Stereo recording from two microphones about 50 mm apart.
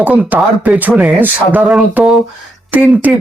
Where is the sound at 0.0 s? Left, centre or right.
Right.